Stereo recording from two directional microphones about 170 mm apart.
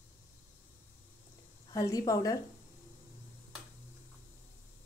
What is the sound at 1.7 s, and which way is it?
Speech, 20° left (ahead or behind).